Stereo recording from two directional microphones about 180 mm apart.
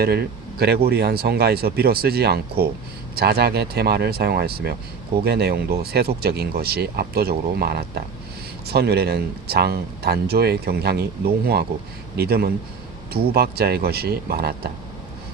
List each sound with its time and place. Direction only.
0.0 s speech: 60° right (ahead or behind)
12.1 s speech: 60° right (ahead or behind)